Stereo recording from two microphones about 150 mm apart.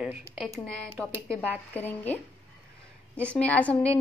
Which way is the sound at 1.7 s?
10° left (ahead or behind).